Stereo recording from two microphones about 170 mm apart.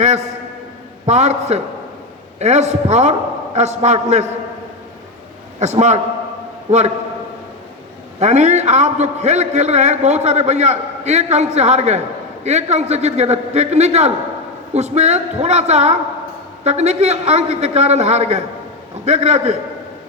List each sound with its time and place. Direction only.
1.0 s a man's voice: 40° right (ahead or behind)
5.5 s a man's voice: 40° right (ahead or behind)
8.2 s a man's voice: 45° right (ahead or behind)